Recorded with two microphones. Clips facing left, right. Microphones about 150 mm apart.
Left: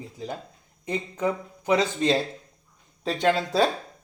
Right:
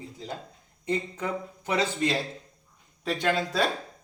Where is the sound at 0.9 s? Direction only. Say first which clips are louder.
Left 3 dB; 15° left (ahead or behind).